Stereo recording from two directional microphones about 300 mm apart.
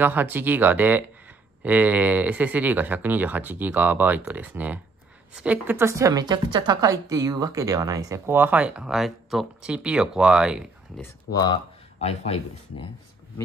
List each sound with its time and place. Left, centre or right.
0.0 s a woman's voice: centre
11.3 s speech: centre